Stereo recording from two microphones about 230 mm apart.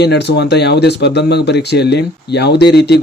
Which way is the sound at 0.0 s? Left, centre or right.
Left.